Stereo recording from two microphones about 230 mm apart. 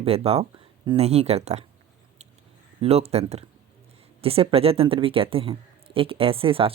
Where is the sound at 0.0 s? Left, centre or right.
Right.